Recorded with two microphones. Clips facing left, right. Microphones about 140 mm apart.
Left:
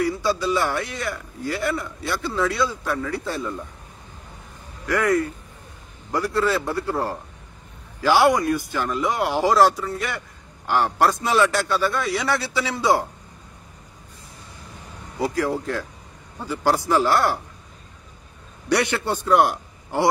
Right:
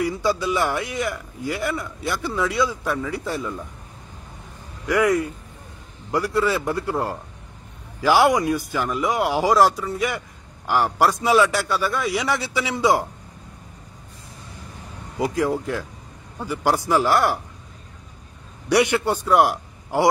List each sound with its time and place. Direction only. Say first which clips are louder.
0.0 s a man's voice: even; 15° right (ahead or behind)
4.8 s a man's voice: right 1 dB; 10° right (ahead or behind)
15.1 s a man's voice: right 1 dB; 20° right (ahead or behind)
18.7 s a man's voice: right 3 dB; 15° right (ahead or behind)